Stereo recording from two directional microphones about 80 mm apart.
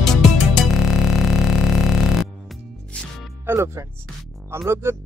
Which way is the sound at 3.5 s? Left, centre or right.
Right.